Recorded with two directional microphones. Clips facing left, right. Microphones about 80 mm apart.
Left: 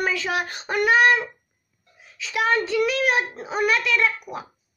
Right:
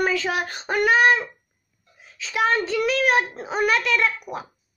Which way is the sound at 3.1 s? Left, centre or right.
Centre.